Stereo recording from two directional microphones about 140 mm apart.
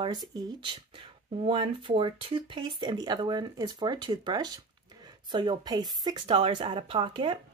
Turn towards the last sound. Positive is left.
turn(degrees=-40)  # may be behind; listen again after turning